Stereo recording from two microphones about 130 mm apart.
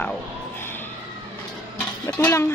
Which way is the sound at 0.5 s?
15° left (ahead or behind).